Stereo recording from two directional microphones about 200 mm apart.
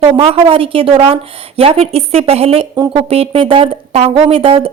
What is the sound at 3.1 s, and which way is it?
A woman's voice, 30° right (ahead or behind).